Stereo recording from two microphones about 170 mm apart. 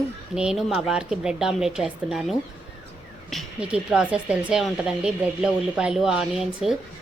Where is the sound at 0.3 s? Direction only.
5° right (ahead or behind).